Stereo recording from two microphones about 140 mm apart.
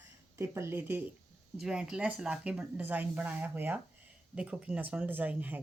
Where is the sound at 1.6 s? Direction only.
5° right (ahead or behind).